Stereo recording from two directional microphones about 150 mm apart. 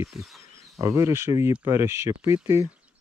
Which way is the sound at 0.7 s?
20° right (ahead or behind).